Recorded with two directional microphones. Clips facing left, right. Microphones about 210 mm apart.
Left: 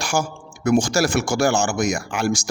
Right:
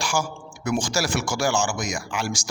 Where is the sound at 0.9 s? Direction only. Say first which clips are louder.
Left 5 dB; 60° left (ahead or behind).